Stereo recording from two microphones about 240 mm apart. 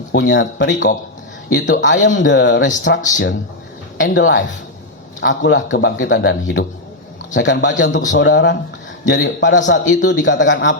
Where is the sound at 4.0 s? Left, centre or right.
Left.